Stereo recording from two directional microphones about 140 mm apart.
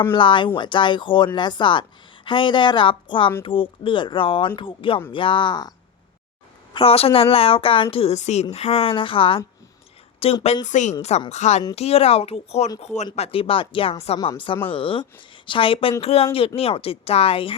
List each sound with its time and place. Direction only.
0.1 s speech: 35° left (ahead or behind)
6.7 s a woman's voice: 45° left (ahead or behind)
10.7 s a woman's voice: 60° left (ahead or behind)
13.1 s a woman's voice: 45° left (ahead or behind)